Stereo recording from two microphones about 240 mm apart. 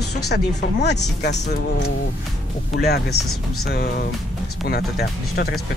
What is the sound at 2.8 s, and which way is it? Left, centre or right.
Speech, left.